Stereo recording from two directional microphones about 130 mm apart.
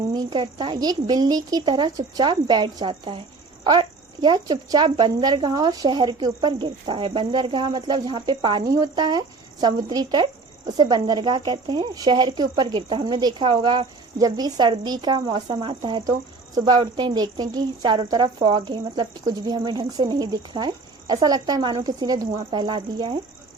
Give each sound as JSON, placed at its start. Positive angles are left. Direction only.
{"t": 0.1, "sound": "speech", "side_deg": -35}